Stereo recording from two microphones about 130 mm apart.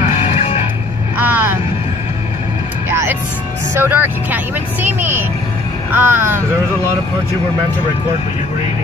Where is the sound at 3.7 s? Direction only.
20° right (ahead or behind).